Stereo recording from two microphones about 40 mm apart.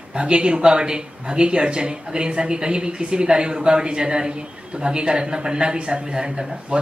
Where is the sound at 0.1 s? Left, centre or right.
Right.